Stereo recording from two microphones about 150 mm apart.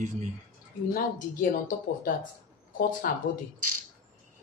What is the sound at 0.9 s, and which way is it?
Speech, 65° left (ahead or behind).